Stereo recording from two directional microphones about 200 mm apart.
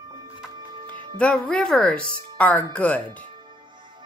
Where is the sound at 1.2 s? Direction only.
5° left (ahead or behind).